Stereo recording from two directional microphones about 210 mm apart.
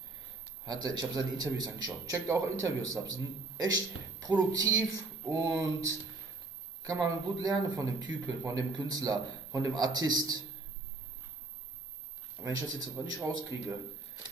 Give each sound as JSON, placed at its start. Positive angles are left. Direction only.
{"t": 0.8, "sound": "speech", "side_deg": -20}
{"t": 12.4, "sound": "speech", "side_deg": -10}